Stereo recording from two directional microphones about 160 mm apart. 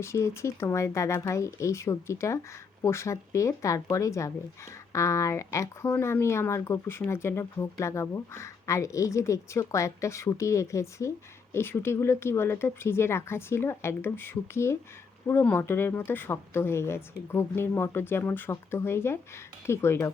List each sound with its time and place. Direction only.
0.0 s speech: 15° left (ahead or behind)